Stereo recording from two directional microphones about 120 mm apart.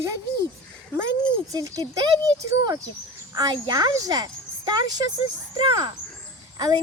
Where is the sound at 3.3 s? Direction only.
35° right (ahead or behind).